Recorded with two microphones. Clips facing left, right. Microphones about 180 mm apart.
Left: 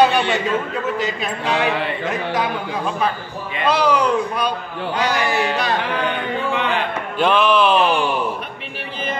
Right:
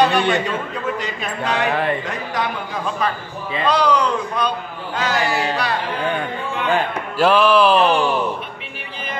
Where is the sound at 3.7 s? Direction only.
5° left (ahead or behind).